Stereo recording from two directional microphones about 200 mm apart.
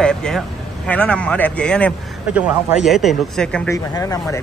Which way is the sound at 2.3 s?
5° right (ahead or behind).